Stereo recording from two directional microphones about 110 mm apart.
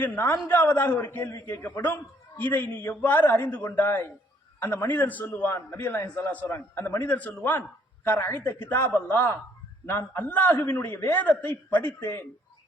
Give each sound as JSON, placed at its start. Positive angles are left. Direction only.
{"t": 0.4, "sound": "a man's voice", "side_deg": 20}